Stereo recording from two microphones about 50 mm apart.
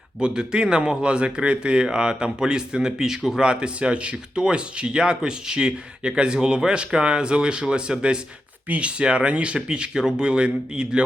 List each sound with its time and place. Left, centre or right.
0.2 s speech: centre